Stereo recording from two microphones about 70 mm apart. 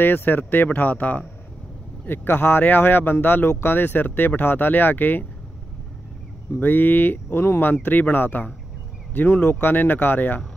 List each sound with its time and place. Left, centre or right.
0.0 s speech: left
6.6 s speech: left
7.4 s speech: left
7.8 s speech: left